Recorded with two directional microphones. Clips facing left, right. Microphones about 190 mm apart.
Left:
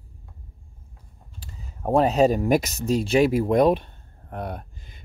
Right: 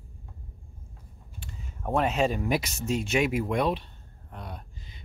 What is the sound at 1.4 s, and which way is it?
Speech, 35° left (ahead or behind).